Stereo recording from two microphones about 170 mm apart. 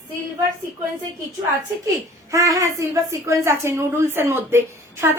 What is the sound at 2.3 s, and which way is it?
A woman's voice, 20° right (ahead or behind).